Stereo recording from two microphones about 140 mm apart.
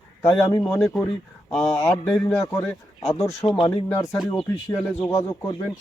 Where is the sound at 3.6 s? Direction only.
25° left (ahead or behind).